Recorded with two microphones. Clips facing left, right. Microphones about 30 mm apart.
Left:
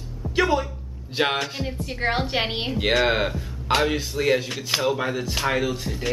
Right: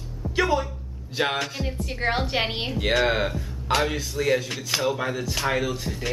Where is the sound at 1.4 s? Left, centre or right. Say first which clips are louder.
Left 1 dB; centre.